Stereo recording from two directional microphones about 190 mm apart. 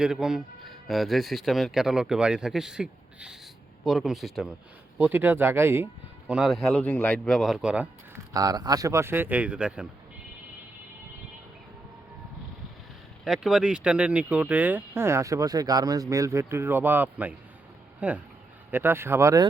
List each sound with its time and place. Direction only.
0.0 s speech: 5° right (ahead or behind)
8.3 s speech: 20° right (ahead or behind)
13.2 s speech: centre (ahead or behind)